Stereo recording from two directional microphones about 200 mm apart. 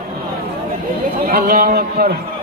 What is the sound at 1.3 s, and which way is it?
Speech, 45° right (ahead or behind).